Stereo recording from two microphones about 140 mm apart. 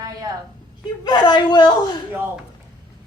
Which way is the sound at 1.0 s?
30° left (ahead or behind).